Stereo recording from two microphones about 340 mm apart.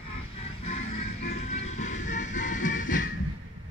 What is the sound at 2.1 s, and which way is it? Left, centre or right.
Music, left.